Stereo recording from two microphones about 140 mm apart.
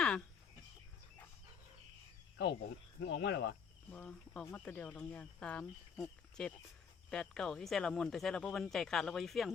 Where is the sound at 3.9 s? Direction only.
10° left (ahead or behind).